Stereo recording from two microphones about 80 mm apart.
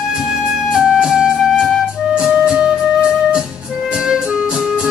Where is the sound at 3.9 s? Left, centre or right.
Centre.